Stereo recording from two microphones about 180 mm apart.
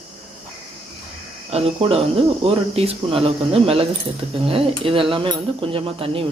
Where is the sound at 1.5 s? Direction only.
35° right (ahead or behind).